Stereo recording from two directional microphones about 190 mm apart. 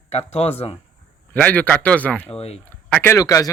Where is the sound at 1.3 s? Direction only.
10° left (ahead or behind).